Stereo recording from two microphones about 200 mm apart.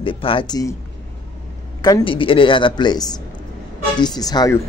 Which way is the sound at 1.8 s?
20° left (ahead or behind).